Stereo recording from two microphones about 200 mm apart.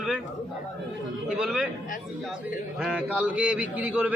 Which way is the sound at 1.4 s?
5° right (ahead or behind).